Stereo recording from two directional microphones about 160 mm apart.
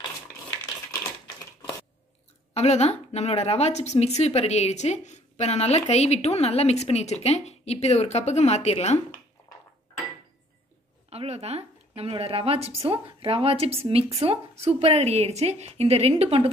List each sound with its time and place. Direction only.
2.5 s speech: 45° left (ahead or behind)
11.1 s speech: 40° right (ahead or behind)